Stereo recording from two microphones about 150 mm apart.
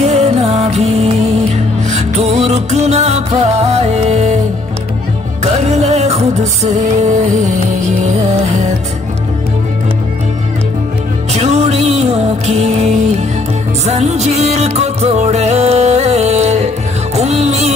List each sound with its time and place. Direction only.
0.0 s music: 45° right (ahead or behind)
5.4 s music: 45° right (ahead or behind)
11.3 s music: 45° right (ahead or behind)